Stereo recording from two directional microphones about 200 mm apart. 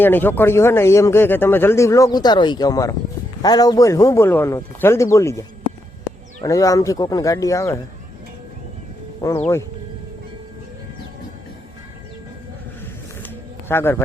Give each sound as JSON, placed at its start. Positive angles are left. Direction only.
{"t": 0.0, "sound": "speech", "side_deg": 10}
{"t": 9.2, "sound": "speech", "side_deg": 15}
{"t": 13.2, "sound": "a sound", "side_deg": 10}